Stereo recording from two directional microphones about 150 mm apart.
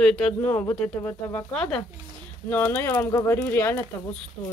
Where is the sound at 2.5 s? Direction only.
15° left (ahead or behind).